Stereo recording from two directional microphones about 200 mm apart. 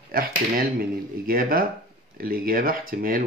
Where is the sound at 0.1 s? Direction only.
45° right (ahead or behind).